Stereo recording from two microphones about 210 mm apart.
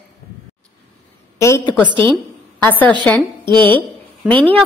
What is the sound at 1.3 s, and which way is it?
A woman's voice, 15° left (ahead or behind).